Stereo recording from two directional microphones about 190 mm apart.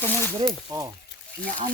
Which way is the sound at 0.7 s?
20° right (ahead or behind).